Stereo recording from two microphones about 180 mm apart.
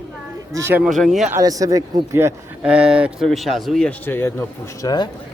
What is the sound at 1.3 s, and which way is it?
Speech, 20° right (ahead or behind).